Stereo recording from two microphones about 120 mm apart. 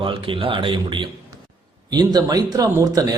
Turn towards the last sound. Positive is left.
turn(degrees=-30)  # may be behind; listen again after turning